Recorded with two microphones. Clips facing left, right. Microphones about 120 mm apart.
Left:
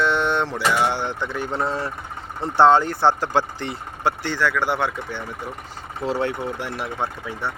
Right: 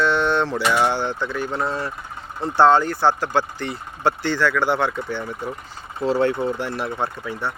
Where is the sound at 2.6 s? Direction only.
20° left (ahead or behind).